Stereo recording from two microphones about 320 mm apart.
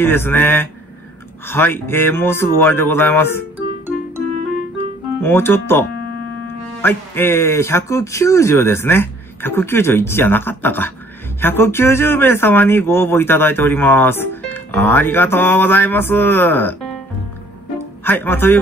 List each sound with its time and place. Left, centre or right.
0.0 s speech: centre
5.2 s speech: centre
18.0 s speech: centre